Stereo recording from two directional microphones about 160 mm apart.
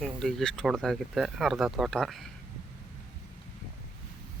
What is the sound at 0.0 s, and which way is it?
Speech, 5° left (ahead or behind).